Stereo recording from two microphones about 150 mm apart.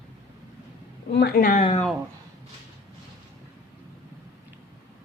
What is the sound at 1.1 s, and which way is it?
Speech, 90° left.